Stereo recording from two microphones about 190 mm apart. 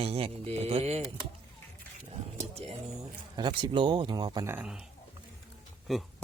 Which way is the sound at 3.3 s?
25° right (ahead or behind).